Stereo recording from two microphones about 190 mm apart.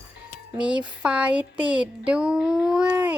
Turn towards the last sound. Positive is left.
turn(degrees=-10)  # may be behind; listen again after turning